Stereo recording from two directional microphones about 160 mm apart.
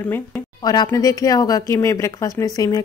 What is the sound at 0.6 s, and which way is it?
Speech, 25° left (ahead or behind).